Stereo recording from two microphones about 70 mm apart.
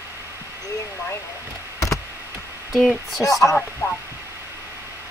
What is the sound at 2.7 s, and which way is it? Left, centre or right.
Speech, centre.